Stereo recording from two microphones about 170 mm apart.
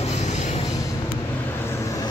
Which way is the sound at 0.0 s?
40° left (ahead or behind).